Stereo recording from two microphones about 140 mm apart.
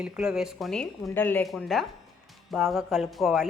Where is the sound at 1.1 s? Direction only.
15° left (ahead or behind).